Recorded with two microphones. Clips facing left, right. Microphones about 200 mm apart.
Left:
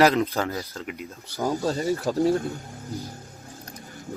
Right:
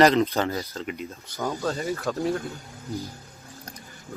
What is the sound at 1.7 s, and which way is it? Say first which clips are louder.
Speech: left 3 dB; 30° left (ahead or behind).